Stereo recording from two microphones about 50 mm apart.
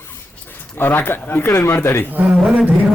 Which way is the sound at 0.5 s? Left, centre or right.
Left.